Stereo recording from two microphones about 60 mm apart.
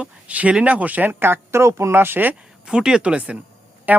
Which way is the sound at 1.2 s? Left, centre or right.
Right.